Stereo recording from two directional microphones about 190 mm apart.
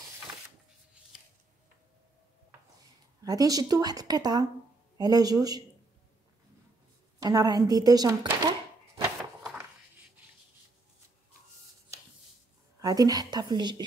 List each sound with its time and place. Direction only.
3.2 s a woman's voice: 20° right (ahead or behind)
7.2 s a woman's voice: 20° right (ahead or behind)
12.8 s a woman's voice: 20° right (ahead or behind)